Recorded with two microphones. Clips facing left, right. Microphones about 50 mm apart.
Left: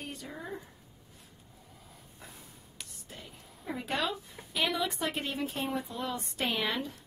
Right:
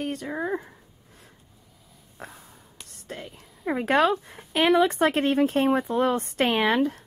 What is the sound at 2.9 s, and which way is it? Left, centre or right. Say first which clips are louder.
A woman's voice: right 15 dB; right.